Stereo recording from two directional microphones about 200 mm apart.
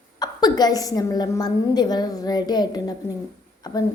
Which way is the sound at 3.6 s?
20° left (ahead or behind).